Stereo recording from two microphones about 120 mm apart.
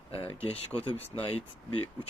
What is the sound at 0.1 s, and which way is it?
Speech, 45° left (ahead or behind).